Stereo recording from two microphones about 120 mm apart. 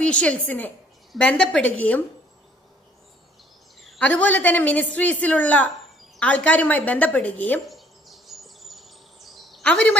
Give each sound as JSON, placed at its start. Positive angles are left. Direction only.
{"t": 0.0, "sound": "a woman's voice", "side_deg": 10}
{"t": 3.8, "sound": "a sound", "side_deg": 0}
{"t": 4.2, "sound": "a woman's voice", "side_deg": 15}
{"t": 7.6, "sound": "bird vocalization", "side_deg": 0}